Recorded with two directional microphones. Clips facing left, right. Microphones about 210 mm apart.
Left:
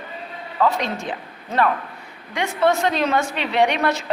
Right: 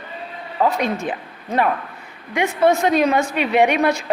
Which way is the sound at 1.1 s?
15° right (ahead or behind).